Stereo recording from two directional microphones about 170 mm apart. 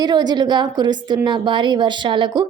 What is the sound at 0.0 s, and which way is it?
A woman's voice, 25° right (ahead or behind).